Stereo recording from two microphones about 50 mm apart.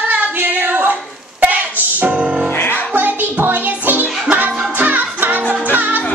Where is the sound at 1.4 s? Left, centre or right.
Right.